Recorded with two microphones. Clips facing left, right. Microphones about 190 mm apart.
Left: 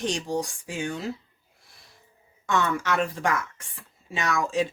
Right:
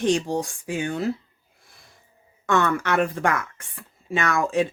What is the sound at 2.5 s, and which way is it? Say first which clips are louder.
Speech: right 3 dB; 60° right (ahead or behind).